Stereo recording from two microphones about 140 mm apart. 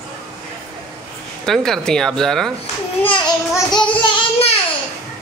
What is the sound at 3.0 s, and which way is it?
Speech, 35° left (ahead or behind).